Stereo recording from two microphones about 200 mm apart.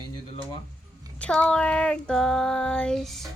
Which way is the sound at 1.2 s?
5° left (ahead or behind).